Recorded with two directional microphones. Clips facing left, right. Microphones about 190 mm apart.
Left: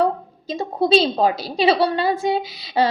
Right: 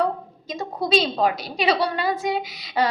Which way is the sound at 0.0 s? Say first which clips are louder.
Left 4 dB; 30° left (ahead or behind).